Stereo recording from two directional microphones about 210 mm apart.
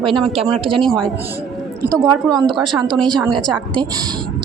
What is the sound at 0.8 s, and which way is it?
Speech, centre (ahead or behind).